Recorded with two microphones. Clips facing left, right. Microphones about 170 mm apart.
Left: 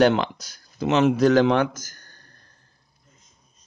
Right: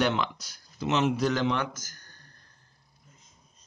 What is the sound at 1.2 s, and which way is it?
Speech, 90° left.